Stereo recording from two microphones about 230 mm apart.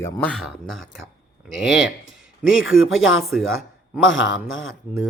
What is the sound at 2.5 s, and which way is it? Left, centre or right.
Speech, left.